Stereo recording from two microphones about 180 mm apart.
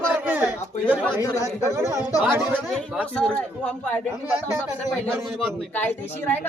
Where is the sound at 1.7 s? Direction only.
15° right (ahead or behind).